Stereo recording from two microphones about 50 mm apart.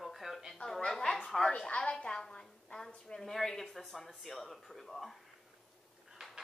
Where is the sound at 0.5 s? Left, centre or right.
Centre.